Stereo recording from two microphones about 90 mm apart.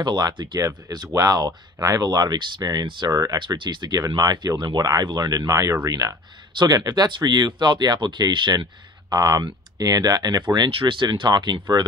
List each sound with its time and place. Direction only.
0.0 s speech: 55° right (ahead or behind)
0.6 s speech: 40° right (ahead or behind); by 3.1 s 55° right (ahead or behind)
3.1 s speech: 40° right (ahead or behind)
3.3 s speech: 65° right (ahead or behind)
4.2 s speech: 45° right (ahead or behind)
10.7 s speech: 75° right (ahead or behind); by 11.6 s 55° right (ahead or behind)